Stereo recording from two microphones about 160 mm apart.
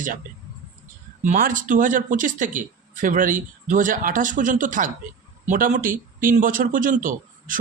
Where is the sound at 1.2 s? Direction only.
55° right (ahead or behind).